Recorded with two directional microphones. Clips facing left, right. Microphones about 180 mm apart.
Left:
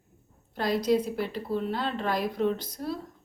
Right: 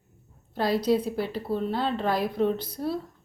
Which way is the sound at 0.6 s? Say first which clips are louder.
Right 1 dB; 30° right (ahead or behind).